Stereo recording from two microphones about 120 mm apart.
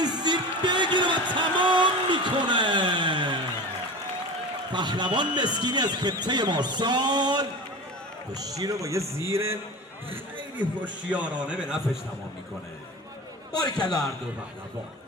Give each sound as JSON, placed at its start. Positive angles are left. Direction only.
{"t": 0.0, "sound": "a sound", "side_deg": -35}
{"t": 4.7, "sound": "a man's voice", "side_deg": -40}
{"t": 10.3, "sound": "a man's voice", "side_deg": -10}
{"t": 13.7, "sound": "a man's voice", "side_deg": 35}